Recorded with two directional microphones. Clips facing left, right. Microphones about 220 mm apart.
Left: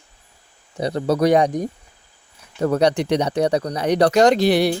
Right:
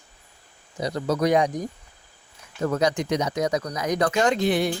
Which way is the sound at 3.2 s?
30° left (ahead or behind).